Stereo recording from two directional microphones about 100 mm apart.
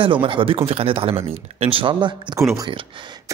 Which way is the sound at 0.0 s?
60° right (ahead or behind).